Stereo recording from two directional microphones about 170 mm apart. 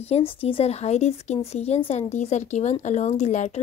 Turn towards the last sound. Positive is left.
turn(degrees=45)  # may be behind; listen again after turning